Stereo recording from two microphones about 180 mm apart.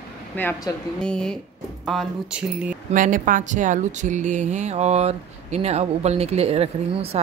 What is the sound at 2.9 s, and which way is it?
Speech, 50° right (ahead or behind).